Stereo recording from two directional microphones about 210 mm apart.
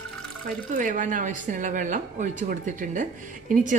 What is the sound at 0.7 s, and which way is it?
Speech, 35° right (ahead or behind).